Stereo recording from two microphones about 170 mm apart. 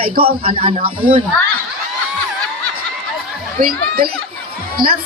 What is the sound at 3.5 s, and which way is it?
A woman's voice, 55° right (ahead or behind).